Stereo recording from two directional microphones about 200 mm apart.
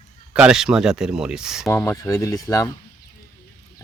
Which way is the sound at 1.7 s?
15° left (ahead or behind).